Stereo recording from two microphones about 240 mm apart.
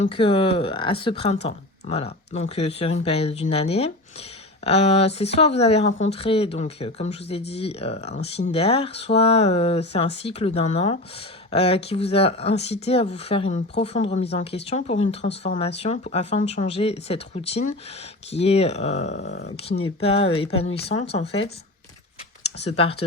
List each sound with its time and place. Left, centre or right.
0.1 s speech: left
19.1 s speech: left
19.8 s speech: left
20.9 s speech: left
22.6 s speech: left